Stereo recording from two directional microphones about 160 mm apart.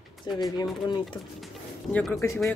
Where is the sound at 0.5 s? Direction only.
30° left (ahead or behind).